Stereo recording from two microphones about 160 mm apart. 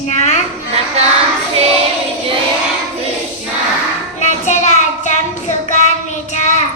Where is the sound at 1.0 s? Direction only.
40° right (ahead or behind).